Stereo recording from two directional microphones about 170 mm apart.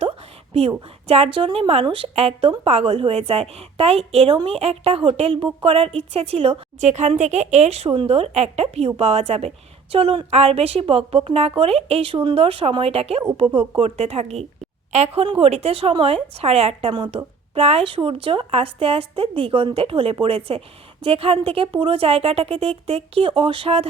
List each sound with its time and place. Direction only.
1.0 s speech: 35° right (ahead or behind)